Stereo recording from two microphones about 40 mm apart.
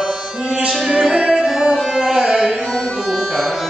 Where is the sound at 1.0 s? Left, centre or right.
Centre.